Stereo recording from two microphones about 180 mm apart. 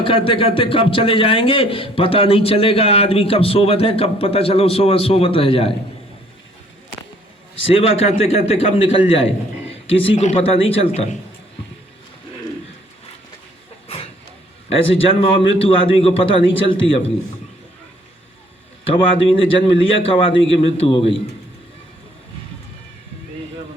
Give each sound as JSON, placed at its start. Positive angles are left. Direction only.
{"t": 0.0, "sound": "speech", "side_deg": 30}
{"t": 7.6, "sound": "speech", "side_deg": 30}
{"t": 13.8, "sound": "vehicle", "side_deg": 30}
{"t": 15.1, "sound": "speech", "side_deg": 30}
{"t": 18.9, "sound": "speech", "side_deg": 30}